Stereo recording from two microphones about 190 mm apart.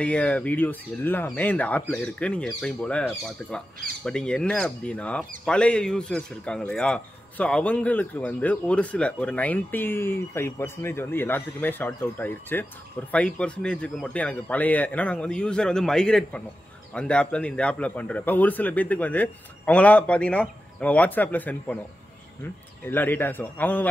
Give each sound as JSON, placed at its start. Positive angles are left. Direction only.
{"t": 0.0, "sound": "a man's voice", "side_deg": 5}
{"t": 22.8, "sound": "speech", "side_deg": 10}